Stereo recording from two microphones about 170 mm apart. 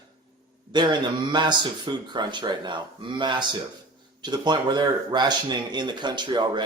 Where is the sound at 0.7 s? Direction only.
25° right (ahead or behind).